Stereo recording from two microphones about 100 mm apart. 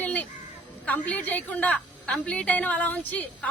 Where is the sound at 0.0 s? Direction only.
15° left (ahead or behind).